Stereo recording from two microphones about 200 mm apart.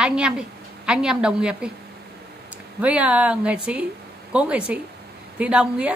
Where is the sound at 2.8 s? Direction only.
5° right (ahead or behind).